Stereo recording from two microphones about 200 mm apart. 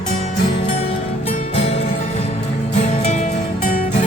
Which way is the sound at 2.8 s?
35° left (ahead or behind).